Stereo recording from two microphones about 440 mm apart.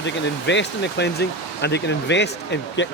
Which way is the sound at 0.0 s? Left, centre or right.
Left.